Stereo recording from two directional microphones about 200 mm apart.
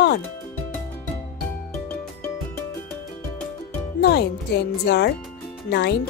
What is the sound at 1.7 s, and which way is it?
Music, 5° left (ahead or behind).